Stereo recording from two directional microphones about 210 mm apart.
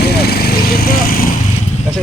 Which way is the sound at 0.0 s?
50° left (ahead or behind).